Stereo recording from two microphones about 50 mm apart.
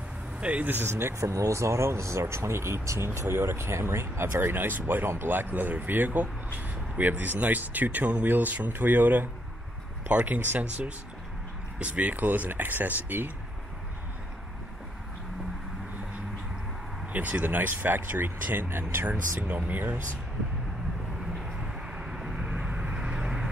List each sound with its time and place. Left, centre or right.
0.4 s speech: right
0.8 s speech: right
1.1 s speech: right
3.2 s speech: right
11.8 s speech: right
17.1 s speech: right
21.9 s vehicle: centre